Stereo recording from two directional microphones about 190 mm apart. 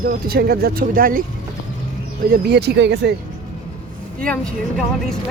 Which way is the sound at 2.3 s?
60° right (ahead or behind).